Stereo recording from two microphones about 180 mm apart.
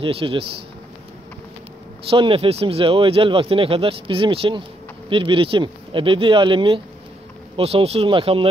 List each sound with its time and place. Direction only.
0.0 s speech: 30° right (ahead or behind)
2.0 s speech: 30° right (ahead or behind)